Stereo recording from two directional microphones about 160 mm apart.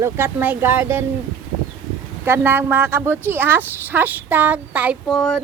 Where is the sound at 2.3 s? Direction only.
15° right (ahead or behind).